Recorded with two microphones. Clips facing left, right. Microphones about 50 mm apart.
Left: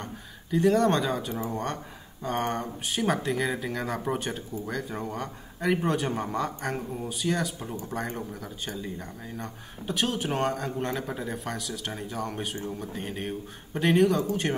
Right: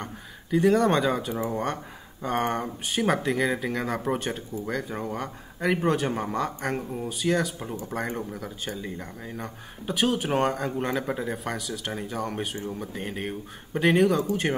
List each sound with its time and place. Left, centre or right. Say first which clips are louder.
0.0 s speech: right 2 dB; centre
7.5 s speech: right 2 dB; centre
7.9 s speech: right 3 dB; centre